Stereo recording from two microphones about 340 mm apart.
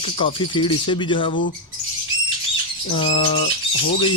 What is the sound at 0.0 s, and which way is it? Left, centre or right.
Speech, centre.